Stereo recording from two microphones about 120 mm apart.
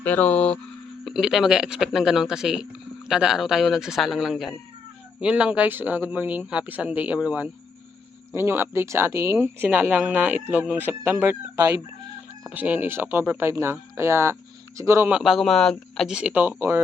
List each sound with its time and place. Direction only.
0.0 s speech: 15° left (ahead or behind)
1.0 s speech: 5° right (ahead or behind); by 15.1 s 25° right (ahead or behind)
15.1 s speech: centre (ahead or behind)
16.1 s speech: 10° right (ahead or behind)